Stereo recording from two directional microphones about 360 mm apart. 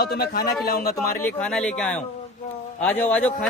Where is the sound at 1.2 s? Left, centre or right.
Centre.